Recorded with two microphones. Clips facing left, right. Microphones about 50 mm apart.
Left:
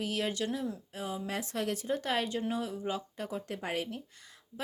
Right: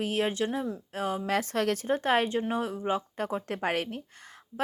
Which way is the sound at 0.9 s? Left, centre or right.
Right.